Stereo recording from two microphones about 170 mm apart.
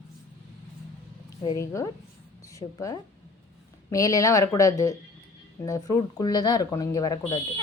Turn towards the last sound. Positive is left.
turn(degrees=25)  # may be behind; listen again after turning